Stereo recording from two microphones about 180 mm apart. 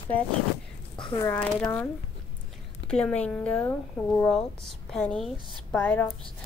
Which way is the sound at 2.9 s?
5° left (ahead or behind).